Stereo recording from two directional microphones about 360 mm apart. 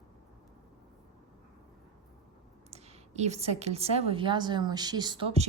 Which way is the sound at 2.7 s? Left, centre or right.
Centre.